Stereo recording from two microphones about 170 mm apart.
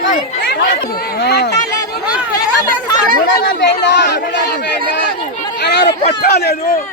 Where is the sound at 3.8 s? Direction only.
90° left.